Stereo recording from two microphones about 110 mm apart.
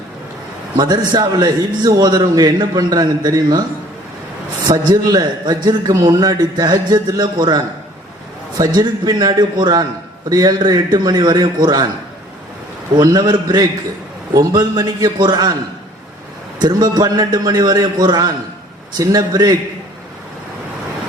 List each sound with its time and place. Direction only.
0.8 s a man's voice: 40° right (ahead or behind)
4.6 s a man's voice: 40° right (ahead or behind)
13.0 s a man's voice: 40° right (ahead or behind)
16.6 s a man's voice: 40° right (ahead or behind)